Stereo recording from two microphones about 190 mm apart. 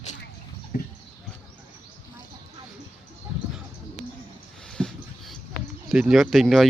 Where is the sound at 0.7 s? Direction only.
50° left (ahead or behind).